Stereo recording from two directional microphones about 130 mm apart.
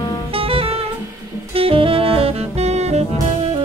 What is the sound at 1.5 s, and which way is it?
Music, 45° right (ahead or behind).